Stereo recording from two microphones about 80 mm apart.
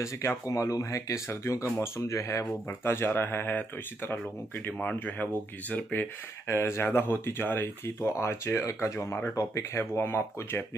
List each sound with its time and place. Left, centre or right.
0.0 s speech: left; by 6.0 s centre
6.5 s speech: left